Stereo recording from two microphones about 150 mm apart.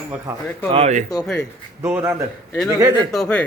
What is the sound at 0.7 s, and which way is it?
Speech, 45° right (ahead or behind).